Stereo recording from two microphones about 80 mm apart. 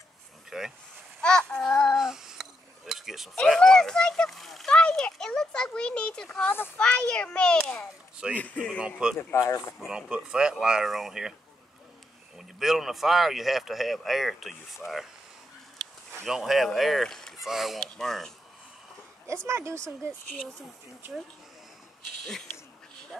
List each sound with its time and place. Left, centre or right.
0.5 s speech: centre
1.2 s child singing: centre
2.0 s a sound: centre
2.9 s cutlery: centre
3.4 s speech: centre
4.6 s a sound: centre
6.3 s speech: left
6.8 s speech: centre
8.2 s speech: centre
9.3 s speech: left
9.8 s speech: centre
12.4 s speech: centre
16.3 s speech: centre
19.2 s speech: right